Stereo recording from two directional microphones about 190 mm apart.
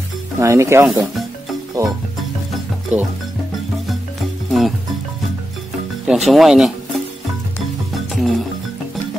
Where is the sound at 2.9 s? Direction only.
10° right (ahead or behind).